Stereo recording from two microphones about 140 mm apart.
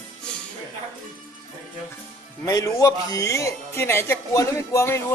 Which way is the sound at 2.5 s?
25° left (ahead or behind).